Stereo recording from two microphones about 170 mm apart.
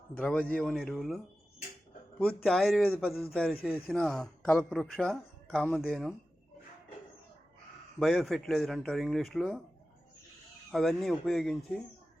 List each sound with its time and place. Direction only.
0.2 s a man's voice: 10° left (ahead or behind)
7.9 s speech: centre (ahead or behind)
10.7 s speech: centre (ahead or behind)